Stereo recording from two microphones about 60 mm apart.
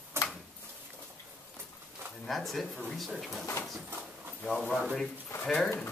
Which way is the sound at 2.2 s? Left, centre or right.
Centre.